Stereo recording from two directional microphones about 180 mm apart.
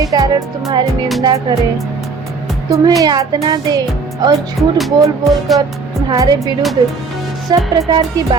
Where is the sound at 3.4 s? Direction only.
20° right (ahead or behind).